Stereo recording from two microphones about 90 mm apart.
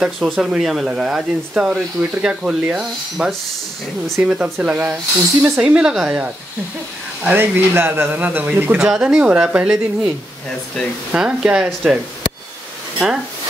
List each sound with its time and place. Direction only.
0.0 s speech: 5° right (ahead or behind)
8.7 s speech: 10° right (ahead or behind)
13.0 s speech: centre (ahead or behind)